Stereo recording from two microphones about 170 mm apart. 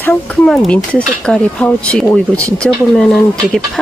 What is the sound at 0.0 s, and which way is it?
Speech, 5° left (ahead or behind).